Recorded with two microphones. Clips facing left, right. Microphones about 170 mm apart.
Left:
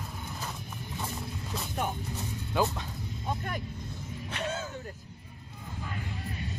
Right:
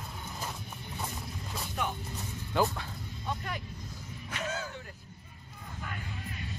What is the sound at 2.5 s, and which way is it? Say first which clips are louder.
Speech: even; 15° left (ahead or behind).